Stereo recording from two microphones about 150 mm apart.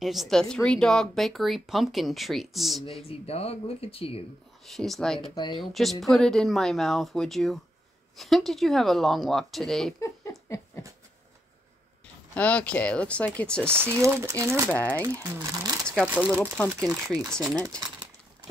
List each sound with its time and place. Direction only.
0.0 s speech: centre (ahead or behind)
2.8 s speech: 40° left (ahead or behind)
4.6 s speech: centre (ahead or behind)
5.3 s speech: 30° left (ahead or behind)
5.6 s speech: centre (ahead or behind)
9.9 s a sound: 20° left (ahead or behind)
12.4 s speech: 10° left (ahead or behind)
13.7 s speech: 15° right (ahead or behind)
14.7 s speech: 10° left (ahead or behind)
15.6 s sewing machine: 25° right (ahead or behind)
16.0 s speech: 5° right (ahead or behind)